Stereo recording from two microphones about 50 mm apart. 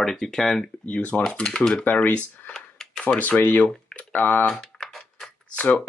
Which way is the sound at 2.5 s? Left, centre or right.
Centre.